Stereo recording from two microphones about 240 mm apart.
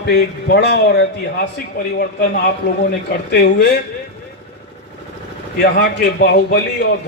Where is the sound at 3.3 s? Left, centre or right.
Left.